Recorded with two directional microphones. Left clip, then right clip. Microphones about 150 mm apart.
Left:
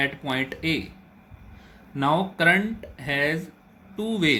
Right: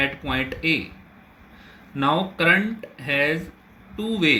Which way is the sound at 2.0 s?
70° left (ahead or behind).